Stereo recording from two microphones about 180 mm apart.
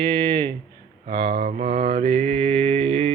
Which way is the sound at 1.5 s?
35° right (ahead or behind).